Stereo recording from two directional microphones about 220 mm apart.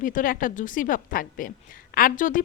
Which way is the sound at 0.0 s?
35° left (ahead or behind).